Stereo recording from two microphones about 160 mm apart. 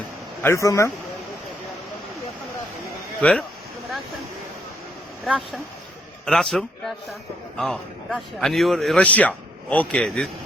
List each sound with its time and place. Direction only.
0.4 s speech: 20° left (ahead or behind)
3.2 s a man's voice: 5° left (ahead or behind)
5.2 s a man's voice: centre (ahead or behind)